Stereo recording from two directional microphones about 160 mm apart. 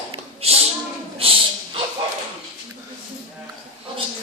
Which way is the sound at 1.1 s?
35° right (ahead or behind).